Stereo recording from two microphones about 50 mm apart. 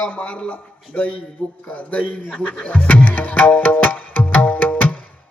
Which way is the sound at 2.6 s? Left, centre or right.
Left.